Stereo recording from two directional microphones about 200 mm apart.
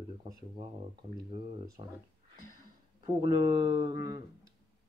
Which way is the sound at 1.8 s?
30° right (ahead or behind).